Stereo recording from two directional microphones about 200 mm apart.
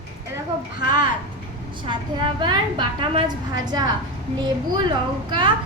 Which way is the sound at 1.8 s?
25° right (ahead or behind).